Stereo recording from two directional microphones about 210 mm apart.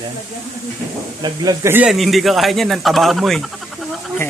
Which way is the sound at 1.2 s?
15° right (ahead or behind).